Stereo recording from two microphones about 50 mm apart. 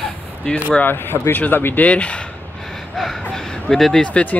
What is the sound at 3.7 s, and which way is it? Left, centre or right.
Speech, centre.